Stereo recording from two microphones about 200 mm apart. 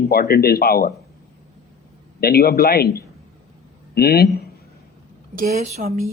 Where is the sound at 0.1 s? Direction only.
50° left (ahead or behind).